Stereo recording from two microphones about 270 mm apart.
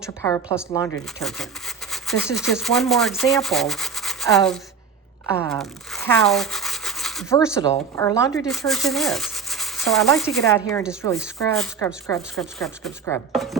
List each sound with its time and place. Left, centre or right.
0.2 s speech: centre
1.2 s speech: centre
3.3 s sanding: centre
5.3 s rub: centre
7.3 s speech: centre
8.4 s a sound: centre
10.1 s speech: centre